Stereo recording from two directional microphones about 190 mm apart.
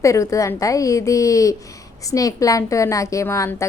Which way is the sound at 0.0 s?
15° left (ahead or behind).